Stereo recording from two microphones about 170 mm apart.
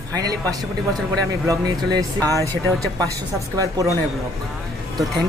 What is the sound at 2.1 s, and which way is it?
Speech, 15° left (ahead or behind).